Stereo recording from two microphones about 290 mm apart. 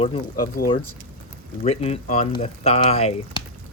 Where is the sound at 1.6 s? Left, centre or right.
Left.